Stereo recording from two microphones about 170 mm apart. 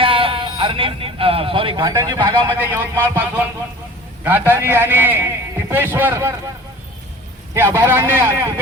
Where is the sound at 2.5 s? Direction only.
10° right (ahead or behind).